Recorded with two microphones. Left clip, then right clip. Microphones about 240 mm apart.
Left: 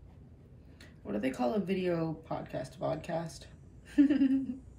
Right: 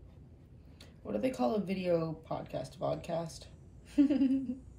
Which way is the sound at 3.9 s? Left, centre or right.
Centre.